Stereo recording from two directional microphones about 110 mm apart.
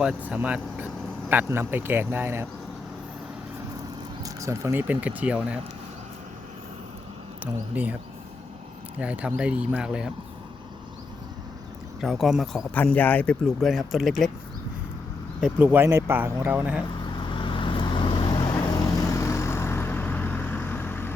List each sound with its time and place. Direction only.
0.2 s speech: 15° right (ahead or behind)
4.2 s speech: 30° right (ahead or behind); by 5.5 s 10° right (ahead or behind)
7.8 s speech: 15° right (ahead or behind)
9.0 s speech: 10° right (ahead or behind)
11.9 s speech: centre (ahead or behind)
12.7 s speech: 15° left (ahead or behind)
13.6 s speech: centre (ahead or behind)
15.4 s speech: 10° right (ahead or behind)
17.2 s vehicle: 50° left (ahead or behind)
18.5 s vehicle: 30° left (ahead or behind)